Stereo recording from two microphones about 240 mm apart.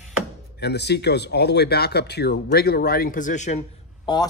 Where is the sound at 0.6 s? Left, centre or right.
Left.